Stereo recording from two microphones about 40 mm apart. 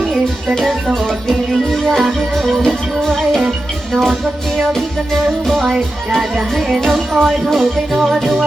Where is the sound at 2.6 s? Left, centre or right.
Centre.